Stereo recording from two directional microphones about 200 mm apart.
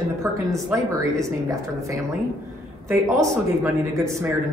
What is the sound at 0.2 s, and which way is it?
Speech, 15° right (ahead or behind).